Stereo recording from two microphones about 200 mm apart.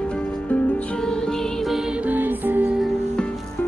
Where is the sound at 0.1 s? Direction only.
5° left (ahead or behind).